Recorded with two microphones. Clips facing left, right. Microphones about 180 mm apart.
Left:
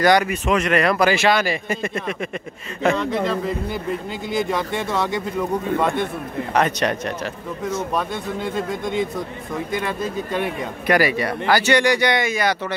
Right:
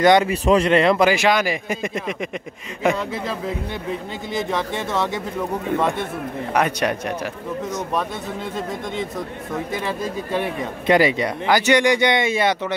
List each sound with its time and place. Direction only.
0.0 s a man's voice: 25° right (ahead or behind); by 10.5 s 5° right (ahead or behind)
10.9 s speech: 20° right (ahead or behind)